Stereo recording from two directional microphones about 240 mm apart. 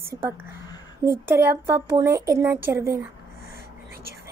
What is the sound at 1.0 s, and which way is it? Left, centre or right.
Speech, centre.